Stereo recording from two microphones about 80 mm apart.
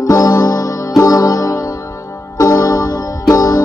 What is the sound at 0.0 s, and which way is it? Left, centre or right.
Music, left.